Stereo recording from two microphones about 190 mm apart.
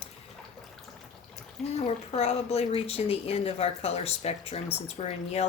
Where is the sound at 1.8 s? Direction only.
30° left (ahead or behind).